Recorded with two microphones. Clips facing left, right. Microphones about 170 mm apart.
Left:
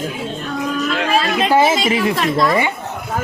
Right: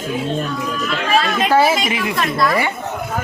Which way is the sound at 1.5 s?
15° left (ahead or behind).